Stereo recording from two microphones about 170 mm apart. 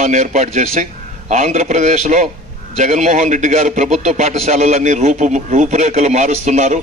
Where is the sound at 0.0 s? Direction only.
45° right (ahead or behind).